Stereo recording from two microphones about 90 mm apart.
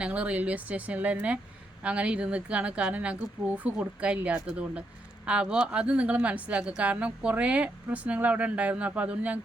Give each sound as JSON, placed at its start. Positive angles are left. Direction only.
{"t": 0.0, "sound": "a woman's voice", "side_deg": -15}